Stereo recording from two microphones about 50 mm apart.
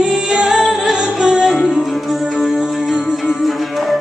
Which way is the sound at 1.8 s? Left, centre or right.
Centre.